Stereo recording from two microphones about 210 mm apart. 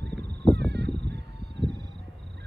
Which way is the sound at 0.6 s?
55° right (ahead or behind).